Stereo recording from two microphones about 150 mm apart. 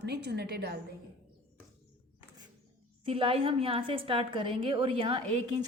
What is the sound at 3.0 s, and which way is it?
A woman's voice, 35° right (ahead or behind).